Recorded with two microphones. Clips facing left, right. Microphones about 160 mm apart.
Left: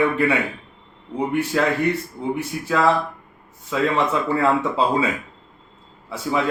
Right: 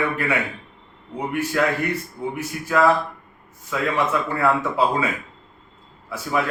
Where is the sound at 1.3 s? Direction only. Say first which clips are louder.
Left 1 dB; 25° left (ahead or behind).